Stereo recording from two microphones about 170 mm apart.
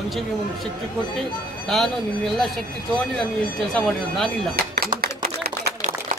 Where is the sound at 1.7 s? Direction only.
Centre (ahead or behind).